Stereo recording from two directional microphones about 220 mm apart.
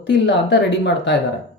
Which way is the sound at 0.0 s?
55° left (ahead or behind).